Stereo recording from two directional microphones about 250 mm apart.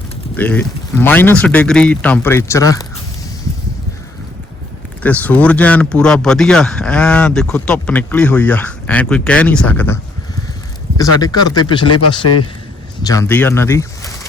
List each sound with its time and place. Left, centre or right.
0.3 s speech: centre
5.0 s speech: centre
11.9 s speech: left
13.0 s speech: centre